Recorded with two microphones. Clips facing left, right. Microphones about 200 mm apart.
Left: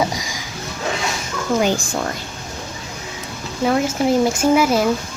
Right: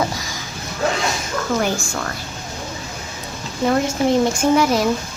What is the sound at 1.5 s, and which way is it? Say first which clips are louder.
Speech: left 5 dB; 20° left (ahead or behind).